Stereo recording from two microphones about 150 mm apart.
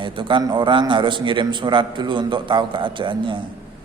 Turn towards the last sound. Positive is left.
turn(degrees=-35)  # may be behind; listen again after turning